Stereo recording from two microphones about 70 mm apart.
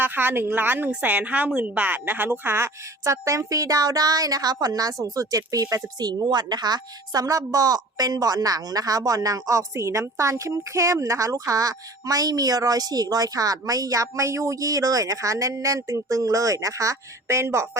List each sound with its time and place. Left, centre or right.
0.0 s speech: right
5.7 s a woman's voice: right